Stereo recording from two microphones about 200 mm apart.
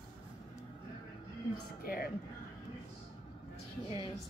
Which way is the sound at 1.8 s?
50° left (ahead or behind).